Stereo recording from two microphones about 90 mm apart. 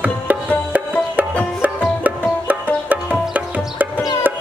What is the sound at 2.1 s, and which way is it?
Music, 20° right (ahead or behind).